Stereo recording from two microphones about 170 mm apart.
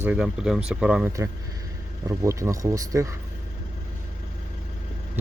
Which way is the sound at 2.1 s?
15° right (ahead or behind).